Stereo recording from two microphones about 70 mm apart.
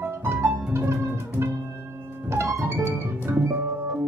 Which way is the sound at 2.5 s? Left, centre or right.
Right.